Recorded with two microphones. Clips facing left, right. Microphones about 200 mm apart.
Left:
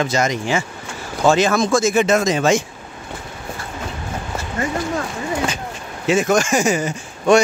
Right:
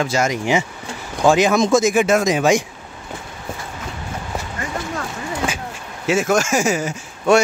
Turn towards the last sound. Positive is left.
turn(degrees=-5)  # may be behind; listen again after turning